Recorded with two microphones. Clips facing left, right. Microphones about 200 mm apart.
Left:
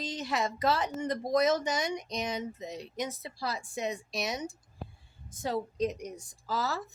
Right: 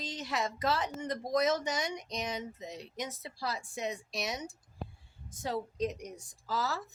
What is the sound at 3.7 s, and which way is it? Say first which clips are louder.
Speech: left 3 dB; 65° left (ahead or behind).